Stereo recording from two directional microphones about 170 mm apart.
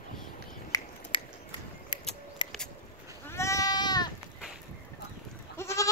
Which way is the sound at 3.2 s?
15° left (ahead or behind).